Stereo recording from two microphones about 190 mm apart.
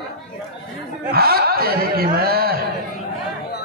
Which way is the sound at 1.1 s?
55° right (ahead or behind).